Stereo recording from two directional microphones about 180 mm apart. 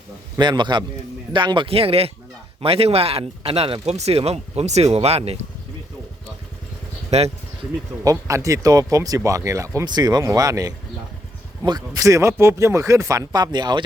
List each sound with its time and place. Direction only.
0.3 s speech: 25° right (ahead or behind)
7.1 s speech: 40° right (ahead or behind)
8.0 s speech: 20° right (ahead or behind)